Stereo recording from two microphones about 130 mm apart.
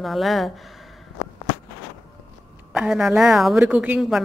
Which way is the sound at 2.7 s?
5° right (ahead or behind).